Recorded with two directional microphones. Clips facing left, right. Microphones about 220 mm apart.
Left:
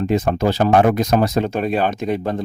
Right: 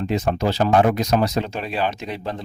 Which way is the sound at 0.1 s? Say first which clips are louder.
Left 3 dB; 50° left (ahead or behind).